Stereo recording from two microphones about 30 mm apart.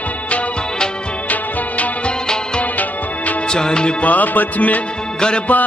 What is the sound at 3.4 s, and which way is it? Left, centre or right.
Music, left.